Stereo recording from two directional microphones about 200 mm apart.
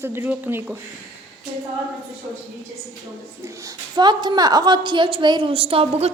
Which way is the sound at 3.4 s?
15° right (ahead or behind).